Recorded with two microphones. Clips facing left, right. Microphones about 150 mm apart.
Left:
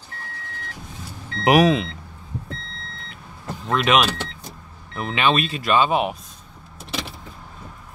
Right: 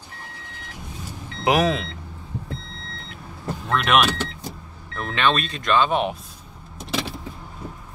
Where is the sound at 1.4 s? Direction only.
10° left (ahead or behind).